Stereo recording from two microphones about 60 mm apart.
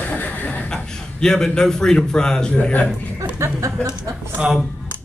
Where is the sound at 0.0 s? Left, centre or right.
Left.